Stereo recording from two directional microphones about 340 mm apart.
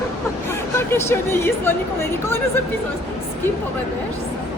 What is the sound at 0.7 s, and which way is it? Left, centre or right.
Speech, centre.